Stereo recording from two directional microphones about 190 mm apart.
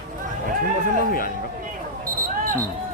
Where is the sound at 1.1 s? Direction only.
50° left (ahead or behind).